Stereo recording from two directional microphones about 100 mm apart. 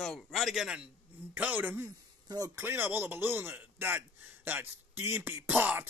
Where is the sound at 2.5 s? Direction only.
20° right (ahead or behind).